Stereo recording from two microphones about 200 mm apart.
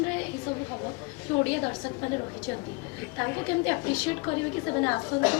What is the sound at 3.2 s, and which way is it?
A man's voice, 15° left (ahead or behind).